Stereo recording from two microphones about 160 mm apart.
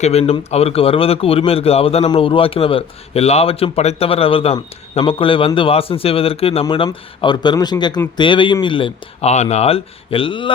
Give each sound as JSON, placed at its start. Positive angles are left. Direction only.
{"t": 0.0, "sound": "a man's voice", "side_deg": 40}